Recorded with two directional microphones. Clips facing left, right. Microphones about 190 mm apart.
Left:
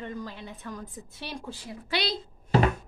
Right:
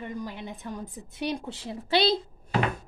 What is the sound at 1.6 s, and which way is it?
Speech, 30° right (ahead or behind).